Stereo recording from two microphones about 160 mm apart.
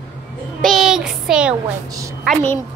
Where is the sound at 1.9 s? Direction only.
20° right (ahead or behind).